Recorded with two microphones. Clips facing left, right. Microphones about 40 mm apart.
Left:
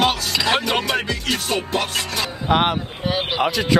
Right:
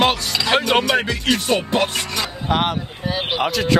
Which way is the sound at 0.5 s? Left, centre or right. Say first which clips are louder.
Right 4 dB; right.